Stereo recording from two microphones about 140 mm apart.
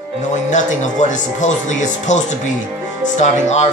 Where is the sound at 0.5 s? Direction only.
60° left (ahead or behind).